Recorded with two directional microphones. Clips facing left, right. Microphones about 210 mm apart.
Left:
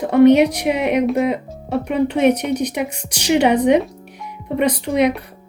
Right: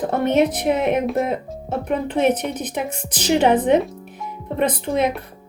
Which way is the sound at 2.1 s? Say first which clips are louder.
Left 2 dB; 10° left (ahead or behind).